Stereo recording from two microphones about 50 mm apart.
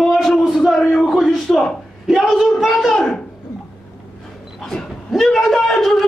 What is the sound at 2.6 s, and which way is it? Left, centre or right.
Speech, centre.